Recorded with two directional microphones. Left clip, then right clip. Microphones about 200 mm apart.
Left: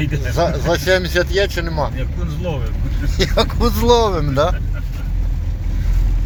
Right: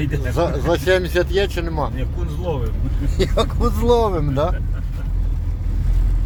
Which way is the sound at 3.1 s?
10° right (ahead or behind).